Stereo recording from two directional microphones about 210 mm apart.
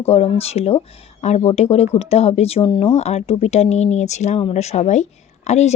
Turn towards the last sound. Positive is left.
turn(degrees=30)  # may be behind; listen again after turning